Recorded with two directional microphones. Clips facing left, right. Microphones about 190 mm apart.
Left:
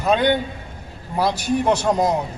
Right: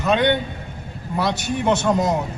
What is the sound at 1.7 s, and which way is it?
Speech, 35° left (ahead or behind).